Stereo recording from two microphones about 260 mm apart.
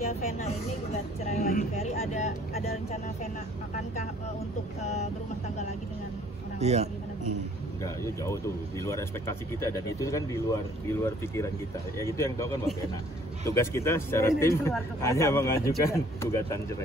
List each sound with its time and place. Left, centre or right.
1.3 s speech: left
6.6 s a man's voice: right
7.8 s speech: centre